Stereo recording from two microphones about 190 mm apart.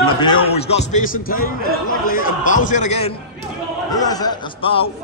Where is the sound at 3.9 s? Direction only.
20° left (ahead or behind).